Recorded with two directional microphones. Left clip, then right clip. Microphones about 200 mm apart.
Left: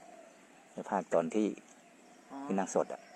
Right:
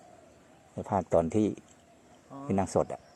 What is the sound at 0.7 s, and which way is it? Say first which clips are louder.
Speech: right 4 dB; 25° right (ahead or behind).